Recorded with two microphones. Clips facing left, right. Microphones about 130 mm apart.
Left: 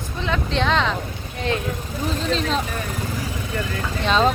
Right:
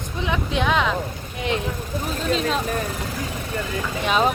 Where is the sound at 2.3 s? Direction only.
5° right (ahead or behind).